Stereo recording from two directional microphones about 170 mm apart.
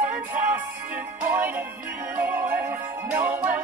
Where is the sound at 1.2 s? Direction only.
10° right (ahead or behind).